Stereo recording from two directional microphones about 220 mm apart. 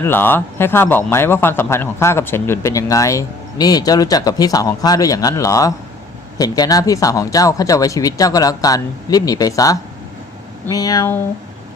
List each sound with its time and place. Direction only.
0.0 s a man's voice: 10° left (ahead or behind)